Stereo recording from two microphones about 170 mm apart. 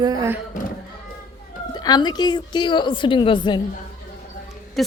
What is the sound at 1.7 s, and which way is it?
A woman's voice, 25° left (ahead or behind).